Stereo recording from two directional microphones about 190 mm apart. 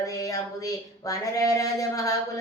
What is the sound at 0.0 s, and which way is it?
Speech, 20° left (ahead or behind).